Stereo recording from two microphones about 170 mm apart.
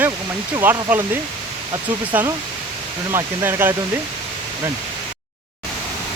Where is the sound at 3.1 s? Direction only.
15° right (ahead or behind).